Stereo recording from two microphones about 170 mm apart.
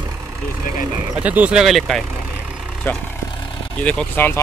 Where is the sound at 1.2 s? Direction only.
10° right (ahead or behind).